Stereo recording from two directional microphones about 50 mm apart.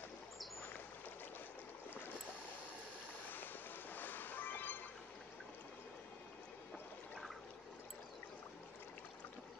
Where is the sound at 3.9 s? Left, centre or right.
Left.